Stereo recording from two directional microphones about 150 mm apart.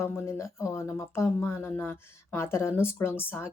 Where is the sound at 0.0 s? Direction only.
20° left (ahead or behind).